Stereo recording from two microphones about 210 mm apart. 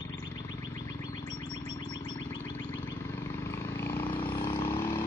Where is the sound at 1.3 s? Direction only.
20° left (ahead or behind).